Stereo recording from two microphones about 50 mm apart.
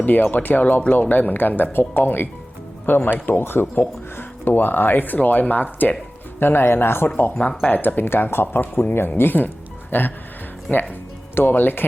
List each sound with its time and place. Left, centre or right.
0.0 s speech: left
6.4 s speech: left
7.7 s speech: left
10.7 s speech: left
11.3 s speech: left